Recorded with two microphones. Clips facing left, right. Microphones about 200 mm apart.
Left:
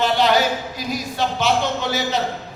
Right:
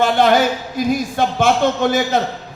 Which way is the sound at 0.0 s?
50° right (ahead or behind).